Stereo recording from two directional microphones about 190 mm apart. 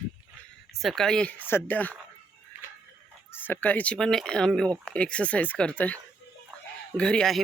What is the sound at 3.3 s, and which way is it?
Speech, 10° left (ahead or behind).